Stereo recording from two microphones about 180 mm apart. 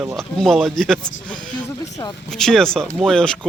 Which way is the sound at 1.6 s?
20° left (ahead or behind).